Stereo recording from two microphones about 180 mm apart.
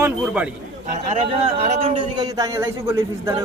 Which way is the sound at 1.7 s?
40° right (ahead or behind).